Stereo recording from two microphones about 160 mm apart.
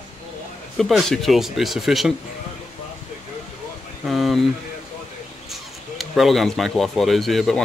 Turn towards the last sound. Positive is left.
turn(degrees=0)  # may be behind; listen again after turning